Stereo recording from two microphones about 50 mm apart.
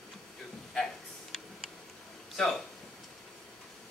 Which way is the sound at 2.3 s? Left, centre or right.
Centre.